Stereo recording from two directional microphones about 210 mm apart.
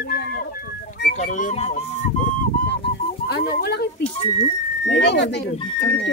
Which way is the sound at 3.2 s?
50° left (ahead or behind).